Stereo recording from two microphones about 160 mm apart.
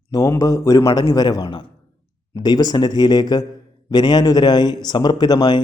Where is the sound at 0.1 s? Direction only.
20° left (ahead or behind).